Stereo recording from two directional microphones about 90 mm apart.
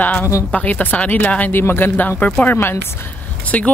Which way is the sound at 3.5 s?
15° left (ahead or behind).